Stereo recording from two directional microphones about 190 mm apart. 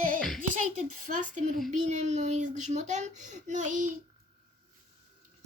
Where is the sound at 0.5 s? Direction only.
45° right (ahead or behind).